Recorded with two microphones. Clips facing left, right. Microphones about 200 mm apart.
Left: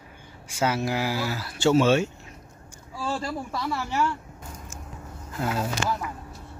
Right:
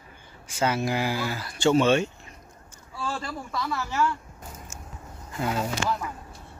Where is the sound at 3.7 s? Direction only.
15° left (ahead or behind).